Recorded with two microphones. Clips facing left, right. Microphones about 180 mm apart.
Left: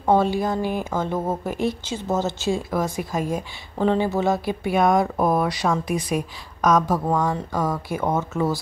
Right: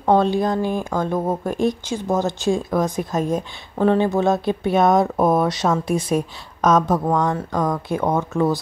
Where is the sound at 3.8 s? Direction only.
10° left (ahead or behind).